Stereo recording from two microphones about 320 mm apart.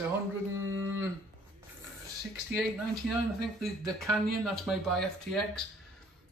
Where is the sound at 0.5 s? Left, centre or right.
Right.